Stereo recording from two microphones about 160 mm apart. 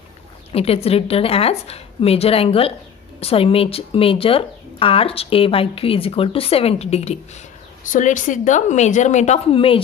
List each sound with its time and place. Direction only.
0.5 s speech: 40° left (ahead or behind)
7.9 s a woman's voice: 55° left (ahead or behind); by 9.8 s 35° left (ahead or behind)